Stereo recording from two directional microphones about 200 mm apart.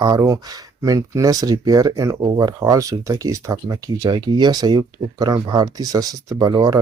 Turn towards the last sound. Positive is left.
turn(degrees=-20)  # may be behind; listen again after turning